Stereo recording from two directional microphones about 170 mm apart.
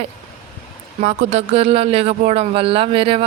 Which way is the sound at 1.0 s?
40° right (ahead or behind).